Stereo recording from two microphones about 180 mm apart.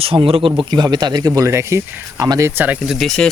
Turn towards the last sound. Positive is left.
turn(degrees=0)  # may be behind; listen again after turning